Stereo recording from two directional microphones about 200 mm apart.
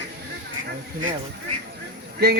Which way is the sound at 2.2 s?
55° right (ahead or behind).